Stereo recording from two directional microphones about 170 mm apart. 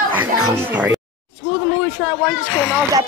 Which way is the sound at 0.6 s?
10° right (ahead or behind).